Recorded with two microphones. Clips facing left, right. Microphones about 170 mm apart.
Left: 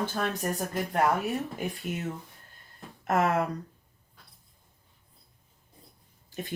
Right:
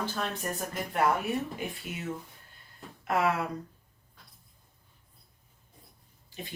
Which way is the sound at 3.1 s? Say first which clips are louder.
Left 2 dB; 45° left (ahead or behind).